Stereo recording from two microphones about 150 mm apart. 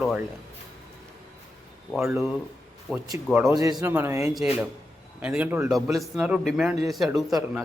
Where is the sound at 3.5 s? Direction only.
25° right (ahead or behind).